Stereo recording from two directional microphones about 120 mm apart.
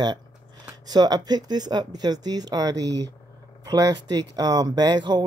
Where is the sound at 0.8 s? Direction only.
35° right (ahead or behind).